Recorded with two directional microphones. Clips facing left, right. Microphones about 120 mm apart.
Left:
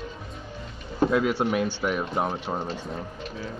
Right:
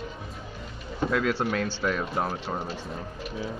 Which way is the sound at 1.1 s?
15° left (ahead or behind).